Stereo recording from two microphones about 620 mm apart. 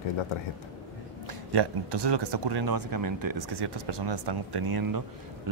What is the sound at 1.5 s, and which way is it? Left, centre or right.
Speech, right.